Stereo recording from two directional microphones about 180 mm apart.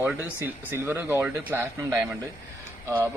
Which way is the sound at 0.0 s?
10° right (ahead or behind).